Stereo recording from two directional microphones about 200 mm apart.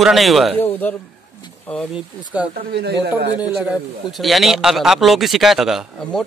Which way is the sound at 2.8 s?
55° right (ahead or behind).